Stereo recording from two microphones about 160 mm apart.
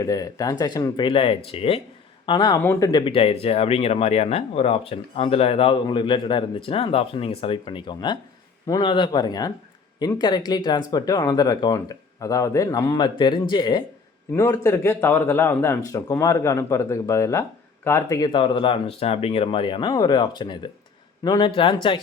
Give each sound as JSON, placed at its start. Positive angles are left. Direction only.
{"t": 0.0, "sound": "speech", "side_deg": 20}
{"t": 2.6, "sound": "a man's voice", "side_deg": 15}
{"t": 2.9, "sound": "a man's voice", "side_deg": 35}
{"t": 18.3, "sound": "speech", "side_deg": 30}